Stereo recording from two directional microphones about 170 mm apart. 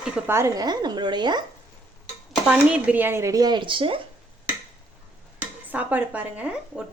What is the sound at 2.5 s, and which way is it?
Speech, 5° right (ahead or behind).